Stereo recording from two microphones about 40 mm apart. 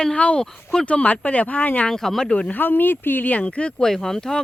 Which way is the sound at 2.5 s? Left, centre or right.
Left.